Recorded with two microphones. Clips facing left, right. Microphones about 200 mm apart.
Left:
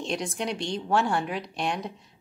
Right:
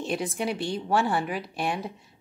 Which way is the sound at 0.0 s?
5° right (ahead or behind).